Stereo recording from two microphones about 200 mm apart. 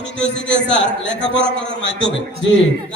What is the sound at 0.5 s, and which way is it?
Speech, 60° left (ahead or behind).